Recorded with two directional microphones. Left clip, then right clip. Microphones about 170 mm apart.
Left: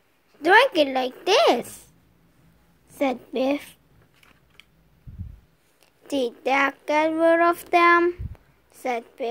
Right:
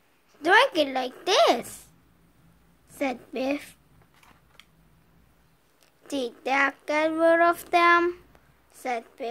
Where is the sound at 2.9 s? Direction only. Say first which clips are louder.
Left 5 dB; 15° left (ahead or behind).